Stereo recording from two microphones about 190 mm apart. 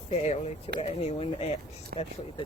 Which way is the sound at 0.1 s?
35° left (ahead or behind).